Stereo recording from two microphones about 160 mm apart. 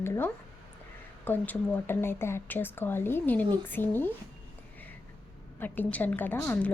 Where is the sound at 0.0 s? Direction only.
15° left (ahead or behind).